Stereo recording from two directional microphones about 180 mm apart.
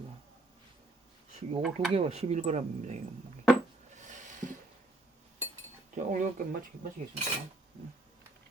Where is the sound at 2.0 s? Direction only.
35° right (ahead or behind).